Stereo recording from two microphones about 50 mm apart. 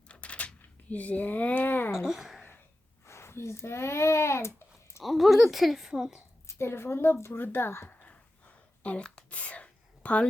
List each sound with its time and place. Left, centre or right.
0.1 s a sound: left
2.0 s a woman's voice: centre
3.1 s speech: left
5.0 s a woman's voice: centre
6.5 s a woman's voice: left
7.3 s speech: left
7.9 s a sound: left
9.3 s whispering: left